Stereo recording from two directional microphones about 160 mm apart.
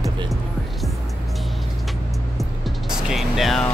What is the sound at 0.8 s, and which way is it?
Music, centre (ahead or behind).